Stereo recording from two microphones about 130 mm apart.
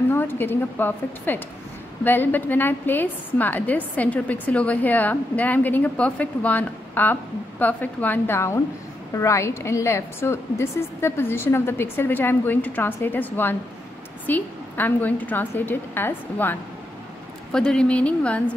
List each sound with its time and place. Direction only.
0.1 s a woman's voice: 15° left (ahead or behind)
17.5 s a woman's voice: 5° left (ahead or behind)